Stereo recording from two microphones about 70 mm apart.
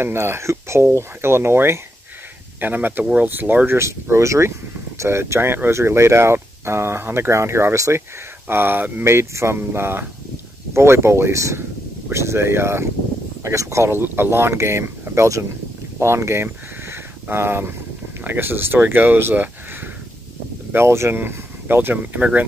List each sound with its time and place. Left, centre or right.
0.0 s speech: right
8.5 s speech: right
9.0 s speech: right
16.9 s a sound: right
18.2 s speech: right
20.7 s speech: right